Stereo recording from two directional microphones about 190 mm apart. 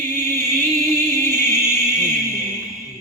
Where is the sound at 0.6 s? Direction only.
20° right (ahead or behind).